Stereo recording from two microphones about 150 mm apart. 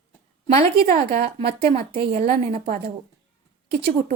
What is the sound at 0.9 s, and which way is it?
Speech, 45° right (ahead or behind).